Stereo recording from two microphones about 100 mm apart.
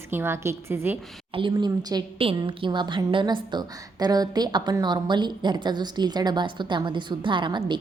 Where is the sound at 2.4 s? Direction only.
55° right (ahead or behind).